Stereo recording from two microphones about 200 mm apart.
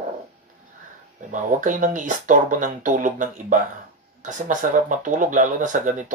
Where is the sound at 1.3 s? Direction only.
40° right (ahead or behind).